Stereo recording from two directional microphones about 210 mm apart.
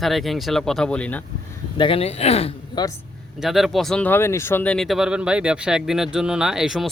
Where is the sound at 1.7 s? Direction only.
25° left (ahead or behind).